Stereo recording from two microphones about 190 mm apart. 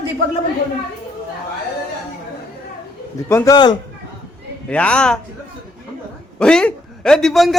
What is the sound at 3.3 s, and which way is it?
Speech, 15° left (ahead or behind).